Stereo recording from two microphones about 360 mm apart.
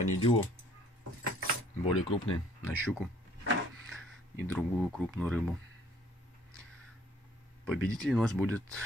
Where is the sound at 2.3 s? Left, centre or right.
Centre.